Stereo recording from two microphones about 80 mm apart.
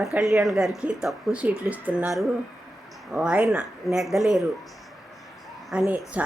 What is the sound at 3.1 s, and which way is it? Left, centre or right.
Speech, centre.